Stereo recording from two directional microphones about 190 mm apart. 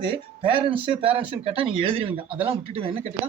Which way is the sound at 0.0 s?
30° right (ahead or behind).